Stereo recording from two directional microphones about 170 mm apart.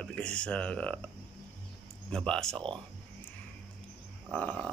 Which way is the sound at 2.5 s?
30° right (ahead or behind).